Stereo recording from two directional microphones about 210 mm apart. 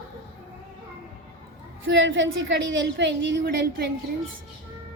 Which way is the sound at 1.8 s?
60° right (ahead or behind).